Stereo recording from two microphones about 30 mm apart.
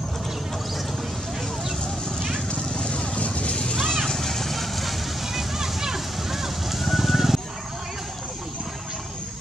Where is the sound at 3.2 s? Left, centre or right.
Left.